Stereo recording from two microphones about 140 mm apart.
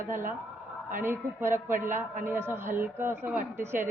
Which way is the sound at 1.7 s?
70° right (ahead or behind).